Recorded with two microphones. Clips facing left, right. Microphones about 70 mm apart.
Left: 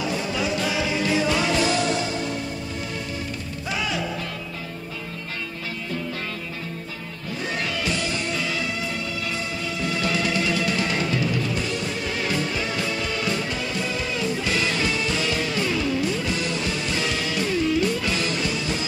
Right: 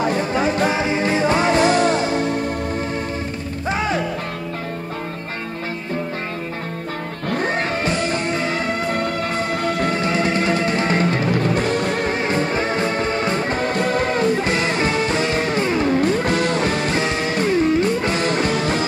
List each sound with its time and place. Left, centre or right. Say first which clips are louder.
0.0 s music: right 7 dB; right
3.6 s music: right 6 dB; right
7.2 s music: right 7 dB; right
9.9 s music: right 5 dB; right
12.2 s music: right 6 dB; right
17.0 s music: right 5 dB; right